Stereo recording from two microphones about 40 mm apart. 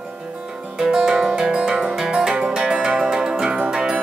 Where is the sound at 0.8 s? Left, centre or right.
Centre.